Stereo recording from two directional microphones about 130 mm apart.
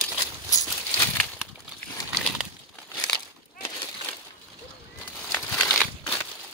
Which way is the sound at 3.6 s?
15° left (ahead or behind).